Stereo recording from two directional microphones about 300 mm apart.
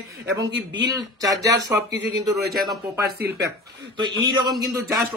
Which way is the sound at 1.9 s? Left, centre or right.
Right.